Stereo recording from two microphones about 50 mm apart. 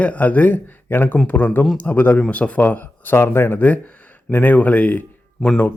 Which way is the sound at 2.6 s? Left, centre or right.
Left.